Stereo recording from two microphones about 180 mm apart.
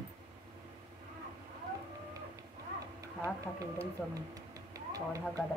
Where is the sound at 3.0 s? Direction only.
20° right (ahead or behind).